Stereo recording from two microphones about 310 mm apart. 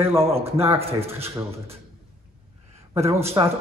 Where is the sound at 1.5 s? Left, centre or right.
Centre.